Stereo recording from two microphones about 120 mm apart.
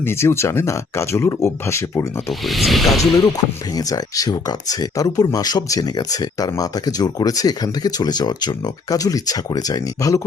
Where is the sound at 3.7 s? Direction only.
30° left (ahead or behind).